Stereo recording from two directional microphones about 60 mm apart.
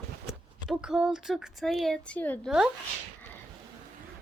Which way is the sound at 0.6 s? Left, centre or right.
Centre.